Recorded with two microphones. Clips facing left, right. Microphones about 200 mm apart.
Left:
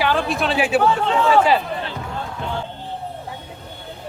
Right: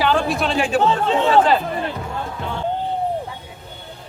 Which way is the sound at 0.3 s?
Centre (ahead or behind).